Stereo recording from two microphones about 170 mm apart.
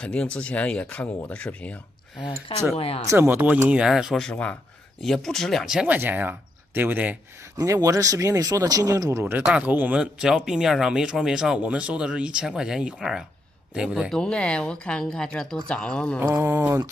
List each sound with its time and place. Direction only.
0.0 s speech: 5° left (ahead or behind)
2.2 s speech: 30° left (ahead or behind)
3.1 s speech: 10° right (ahead or behind); by 16.2 s 5° left (ahead or behind)
16.2 s speech: 15° right (ahead or behind)